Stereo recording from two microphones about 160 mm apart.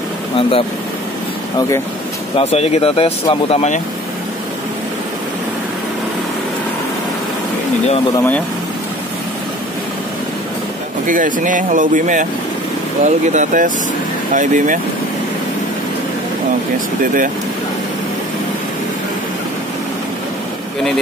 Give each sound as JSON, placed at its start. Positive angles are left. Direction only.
{"t": 0.4, "sound": "speech", "side_deg": 35}
{"t": 2.3, "sound": "speech", "side_deg": 40}
{"t": 11.1, "sound": "speech", "side_deg": -55}